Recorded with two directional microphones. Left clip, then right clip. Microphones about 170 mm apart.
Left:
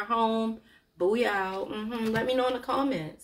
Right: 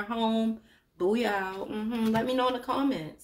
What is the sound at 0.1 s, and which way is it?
Speech, 40° right (ahead or behind).